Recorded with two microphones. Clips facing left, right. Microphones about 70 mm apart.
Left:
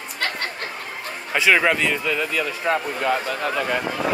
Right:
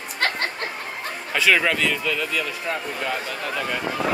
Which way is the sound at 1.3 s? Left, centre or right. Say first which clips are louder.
Left 2 dB; left.